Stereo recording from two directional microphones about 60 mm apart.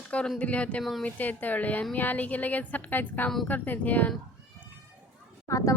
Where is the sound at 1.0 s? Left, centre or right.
Left.